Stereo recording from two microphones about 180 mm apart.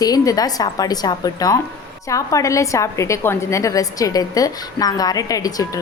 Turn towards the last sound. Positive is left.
turn(degrees=20)  # may be behind; listen again after turning